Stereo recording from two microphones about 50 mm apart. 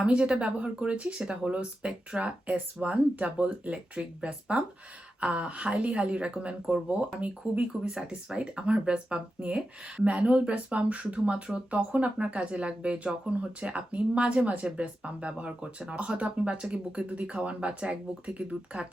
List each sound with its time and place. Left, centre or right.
0.0 s speech: right